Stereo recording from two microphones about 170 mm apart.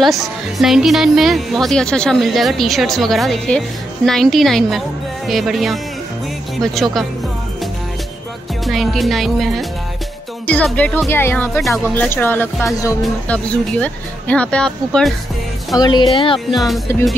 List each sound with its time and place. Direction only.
0.0 s speech: centre (ahead or behind)
8.6 s speech: centre (ahead or behind)
15.8 s speech: 25° left (ahead or behind)
16.5 s speech: centre (ahead or behind)